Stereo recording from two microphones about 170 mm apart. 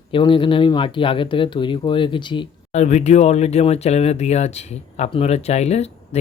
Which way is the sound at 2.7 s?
45° left (ahead or behind).